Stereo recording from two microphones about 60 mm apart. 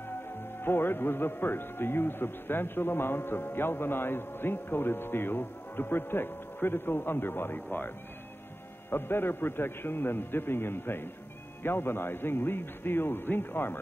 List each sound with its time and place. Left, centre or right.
0.6 s a man's voice: left
8.9 s a man's voice: left